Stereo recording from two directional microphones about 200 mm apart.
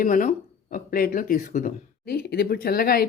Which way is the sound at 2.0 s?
55° left (ahead or behind).